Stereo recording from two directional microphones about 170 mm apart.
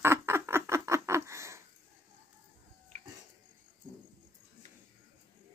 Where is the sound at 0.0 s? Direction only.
15° right (ahead or behind).